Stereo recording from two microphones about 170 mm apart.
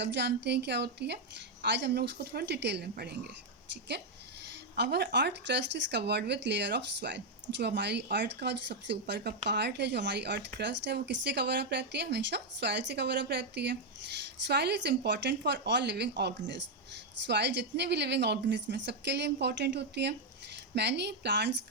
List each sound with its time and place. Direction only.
0.0 s speech: 90° right
1.6 s speech: 90° right; by 3.2 s 70° right (ahead or behind)
4.8 s speech: 85° right